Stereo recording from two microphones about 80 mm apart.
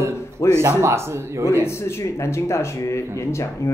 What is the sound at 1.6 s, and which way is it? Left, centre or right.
Speech, left.